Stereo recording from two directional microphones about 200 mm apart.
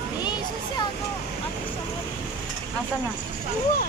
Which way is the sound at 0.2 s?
20° left (ahead or behind).